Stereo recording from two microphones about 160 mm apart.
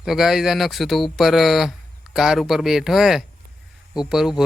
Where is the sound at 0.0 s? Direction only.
Centre (ahead or behind).